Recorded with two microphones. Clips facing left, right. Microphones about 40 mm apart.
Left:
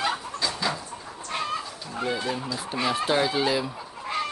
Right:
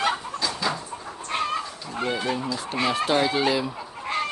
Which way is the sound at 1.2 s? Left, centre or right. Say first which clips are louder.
Right 3 dB; right.